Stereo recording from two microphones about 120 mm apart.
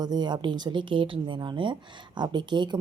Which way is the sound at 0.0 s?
35° right (ahead or behind).